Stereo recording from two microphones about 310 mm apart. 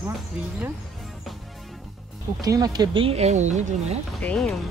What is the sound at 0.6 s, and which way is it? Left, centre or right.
Music, centre.